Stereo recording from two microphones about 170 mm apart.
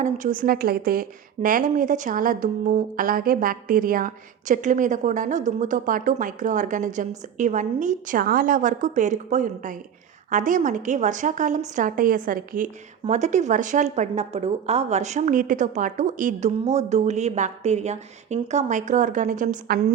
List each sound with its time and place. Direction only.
0.0 s a woman's voice: 50° right (ahead or behind)